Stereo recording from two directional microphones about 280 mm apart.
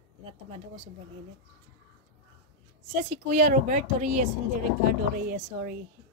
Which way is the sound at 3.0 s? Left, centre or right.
Right.